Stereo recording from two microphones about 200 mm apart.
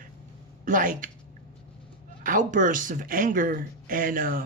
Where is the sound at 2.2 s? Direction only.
40° right (ahead or behind).